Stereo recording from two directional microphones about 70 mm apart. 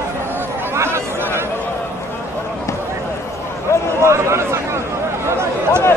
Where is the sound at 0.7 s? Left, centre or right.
Right.